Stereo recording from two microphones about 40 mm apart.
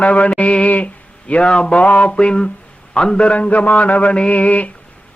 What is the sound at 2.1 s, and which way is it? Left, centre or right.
A man's voice, left.